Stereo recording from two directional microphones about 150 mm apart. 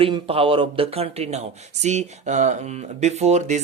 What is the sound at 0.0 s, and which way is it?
Speech, 35° right (ahead or behind).